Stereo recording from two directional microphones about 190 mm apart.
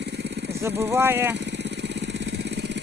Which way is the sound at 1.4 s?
65° right (ahead or behind).